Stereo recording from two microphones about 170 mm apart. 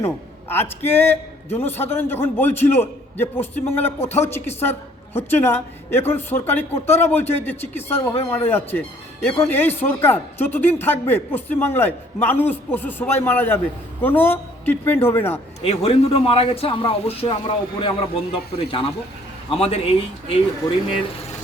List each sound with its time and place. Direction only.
0.0 s a man's voice: 15° left (ahead or behind)
15.6 s a man's voice: 35° left (ahead or behind)